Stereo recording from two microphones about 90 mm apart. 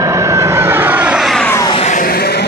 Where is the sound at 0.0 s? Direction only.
35° right (ahead or behind); by 1.2 s 15° right (ahead or behind).